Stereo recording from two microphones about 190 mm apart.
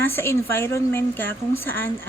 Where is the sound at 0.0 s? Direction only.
15° left (ahead or behind).